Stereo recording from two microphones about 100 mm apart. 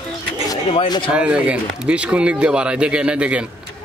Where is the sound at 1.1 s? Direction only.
10° right (ahead or behind).